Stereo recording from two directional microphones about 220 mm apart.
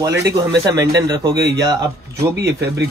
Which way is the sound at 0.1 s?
50° right (ahead or behind).